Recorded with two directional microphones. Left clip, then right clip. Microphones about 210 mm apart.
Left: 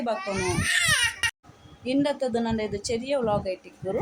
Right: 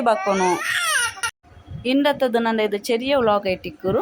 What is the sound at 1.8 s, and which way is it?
Speech, 20° right (ahead or behind).